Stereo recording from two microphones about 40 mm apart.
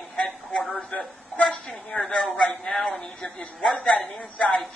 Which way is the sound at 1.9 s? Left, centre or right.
Left.